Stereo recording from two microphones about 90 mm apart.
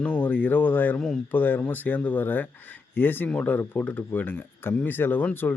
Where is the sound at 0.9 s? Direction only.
5° left (ahead or behind).